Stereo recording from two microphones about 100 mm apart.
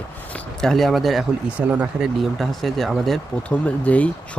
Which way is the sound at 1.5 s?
15° right (ahead or behind).